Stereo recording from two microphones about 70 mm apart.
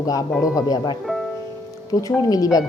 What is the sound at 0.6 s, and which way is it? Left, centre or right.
Speech, left.